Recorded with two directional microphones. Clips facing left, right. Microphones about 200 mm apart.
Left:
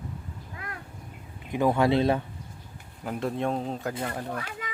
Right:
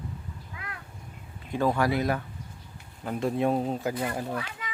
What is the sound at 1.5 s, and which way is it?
Speech, 20° left (ahead or behind).